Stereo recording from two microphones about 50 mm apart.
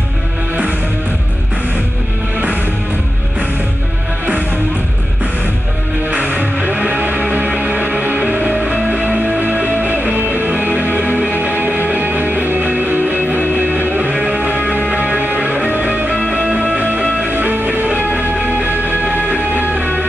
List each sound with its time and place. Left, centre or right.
6.0 s music: right